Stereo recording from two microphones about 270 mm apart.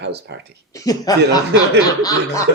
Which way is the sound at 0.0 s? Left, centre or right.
Right.